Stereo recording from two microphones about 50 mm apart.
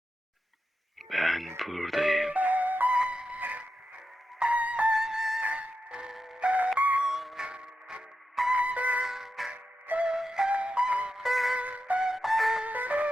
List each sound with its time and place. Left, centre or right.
1.1 s music: centre
2.3 s music: right
2.9 s music: right
4.9 s music: centre
5.4 s music: right; by 6.4 s centre
6.4 s music: right
7.0 s music: centre; by 9.0 s right
9.0 s music: centre
10.5 s music: right
11.1 s music: centre
11.5 s music: right
12.1 s music: centre
12.6 s music: right